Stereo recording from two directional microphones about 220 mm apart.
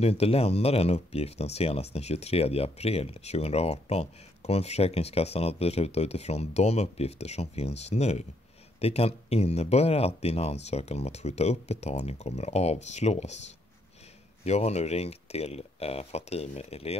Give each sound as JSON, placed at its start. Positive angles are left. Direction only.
{"t": 0.0, "sound": "speech", "side_deg": 25}
{"t": 14.4, "sound": "speech", "side_deg": 30}